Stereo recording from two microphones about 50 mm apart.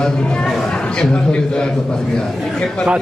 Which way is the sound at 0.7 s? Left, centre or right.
Centre.